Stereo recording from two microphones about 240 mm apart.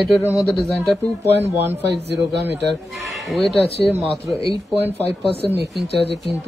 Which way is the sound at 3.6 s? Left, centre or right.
Left.